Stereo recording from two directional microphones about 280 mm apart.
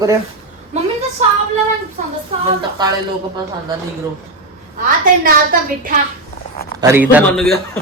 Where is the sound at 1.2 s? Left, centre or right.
Right.